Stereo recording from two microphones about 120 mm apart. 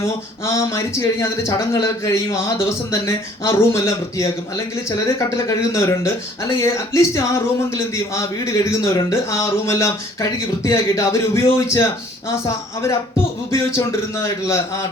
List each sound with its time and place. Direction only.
0.0 s speech: 25° left (ahead or behind)